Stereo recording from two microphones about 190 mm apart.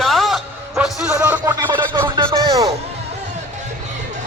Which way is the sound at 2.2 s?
15° right (ahead or behind).